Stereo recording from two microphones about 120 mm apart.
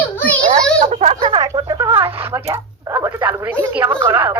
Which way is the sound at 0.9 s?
70° right (ahead or behind).